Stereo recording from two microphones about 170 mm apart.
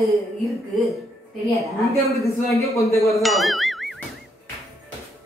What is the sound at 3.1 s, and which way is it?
Ding, centre (ahead or behind).